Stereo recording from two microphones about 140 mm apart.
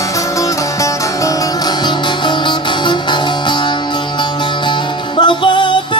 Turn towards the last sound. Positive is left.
turn(degrees=35)  # may be behind; listen again after turning